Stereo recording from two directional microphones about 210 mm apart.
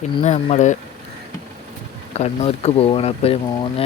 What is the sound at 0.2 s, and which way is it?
Speech, 30° left (ahead or behind).